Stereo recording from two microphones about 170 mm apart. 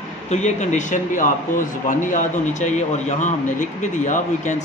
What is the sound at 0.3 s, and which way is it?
Speech, 45° left (ahead or behind).